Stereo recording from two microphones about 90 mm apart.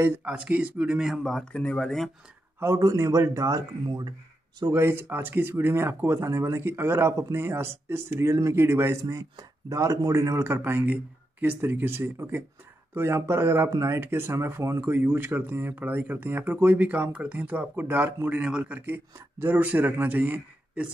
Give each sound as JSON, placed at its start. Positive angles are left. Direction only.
{"t": 0.2, "sound": "speech", "side_deg": -15}
{"t": 1.2, "sound": "speech", "side_deg": 5}
{"t": 2.6, "sound": "a man's voice", "side_deg": -35}
{"t": 4.6, "sound": "speech", "side_deg": -30}
{"t": 9.0, "sound": "speech", "side_deg": -40}
{"t": 14.8, "sound": "speech", "side_deg": -20}